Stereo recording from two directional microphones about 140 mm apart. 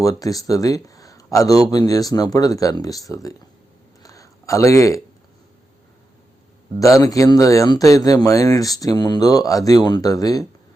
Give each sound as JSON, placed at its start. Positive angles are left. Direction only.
{"t": 0.0, "sound": "speech", "side_deg": 25}
{"t": 4.0, "sound": "a sound", "side_deg": 25}
{"t": 6.7, "sound": "speech", "side_deg": 25}